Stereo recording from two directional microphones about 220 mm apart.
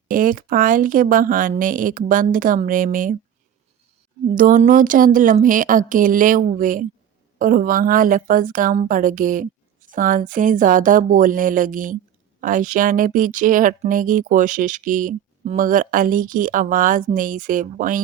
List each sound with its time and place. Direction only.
0.1 s speech: 40° right (ahead or behind)
4.4 s speech: 40° right (ahead or behind)